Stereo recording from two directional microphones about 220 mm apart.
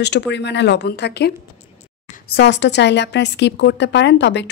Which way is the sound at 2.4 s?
50° left (ahead or behind).